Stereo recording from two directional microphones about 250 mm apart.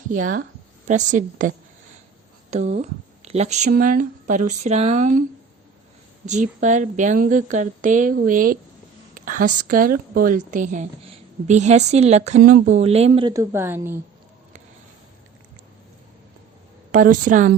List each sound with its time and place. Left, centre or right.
0.1 s a woman's voice: right
6.2 s speech: right
9.1 s a sound: right
9.6 s a woman's voice: right; by 14.0 s centre
16.9 s speech: right